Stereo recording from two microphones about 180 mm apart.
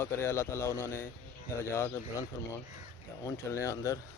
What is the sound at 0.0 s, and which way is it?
Speech, 15° left (ahead or behind).